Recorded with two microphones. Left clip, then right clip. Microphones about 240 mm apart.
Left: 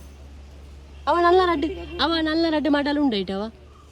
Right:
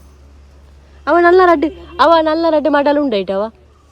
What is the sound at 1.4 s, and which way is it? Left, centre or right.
Speech, right.